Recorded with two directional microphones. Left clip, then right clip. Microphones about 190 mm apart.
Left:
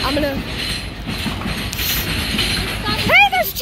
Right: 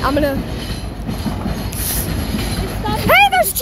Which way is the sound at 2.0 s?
10° right (ahead or behind).